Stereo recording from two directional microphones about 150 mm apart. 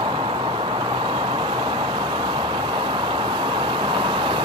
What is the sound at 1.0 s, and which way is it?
Vehicle, 35° right (ahead or behind).